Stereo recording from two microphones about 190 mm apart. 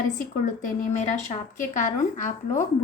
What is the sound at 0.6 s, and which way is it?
Speech, 40° left (ahead or behind).